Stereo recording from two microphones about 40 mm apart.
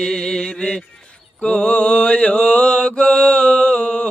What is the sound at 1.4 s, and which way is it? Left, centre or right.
Mantra, left.